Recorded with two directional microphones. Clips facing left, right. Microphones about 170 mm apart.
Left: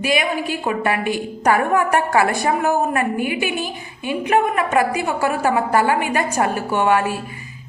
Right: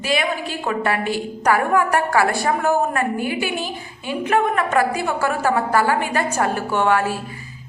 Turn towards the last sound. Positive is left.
turn(degrees=15)  # may be behind; listen again after turning